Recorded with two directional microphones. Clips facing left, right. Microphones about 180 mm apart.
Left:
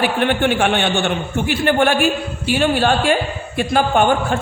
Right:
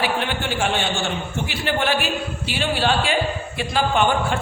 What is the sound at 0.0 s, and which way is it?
A man's voice, 60° left (ahead or behind).